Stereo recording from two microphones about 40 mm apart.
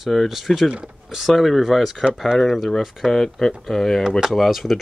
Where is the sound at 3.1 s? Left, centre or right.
Centre.